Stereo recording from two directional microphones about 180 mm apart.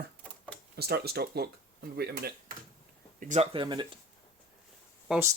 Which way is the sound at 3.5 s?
25° right (ahead or behind).